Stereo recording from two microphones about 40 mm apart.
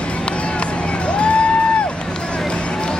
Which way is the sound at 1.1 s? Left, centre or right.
Left.